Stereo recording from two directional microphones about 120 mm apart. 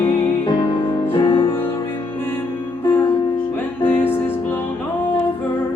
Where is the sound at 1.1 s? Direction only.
45° left (ahead or behind).